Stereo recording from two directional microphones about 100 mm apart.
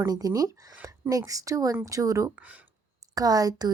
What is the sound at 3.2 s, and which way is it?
Speech, 40° right (ahead or behind).